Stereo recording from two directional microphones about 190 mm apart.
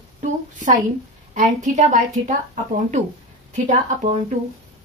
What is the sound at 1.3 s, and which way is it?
Speech, 40° right (ahead or behind).